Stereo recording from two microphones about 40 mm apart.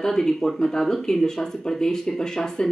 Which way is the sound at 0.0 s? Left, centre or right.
Centre.